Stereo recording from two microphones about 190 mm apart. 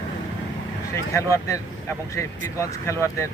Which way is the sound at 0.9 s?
15° left (ahead or behind).